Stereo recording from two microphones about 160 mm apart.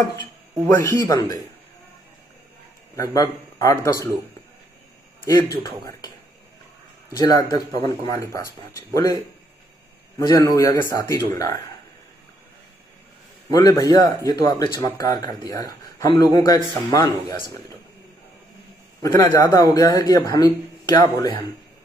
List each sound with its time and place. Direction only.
0.7 s speech: 15° left (ahead or behind)
3.0 s speech: 20° left (ahead or behind)
5.6 s speech: 25° left (ahead or behind)
13.5 s speech: 20° left (ahead or behind)
19.0 s speech: 25° left (ahead or behind)